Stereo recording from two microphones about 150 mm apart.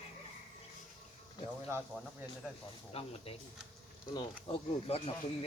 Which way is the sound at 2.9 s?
40° left (ahead or behind).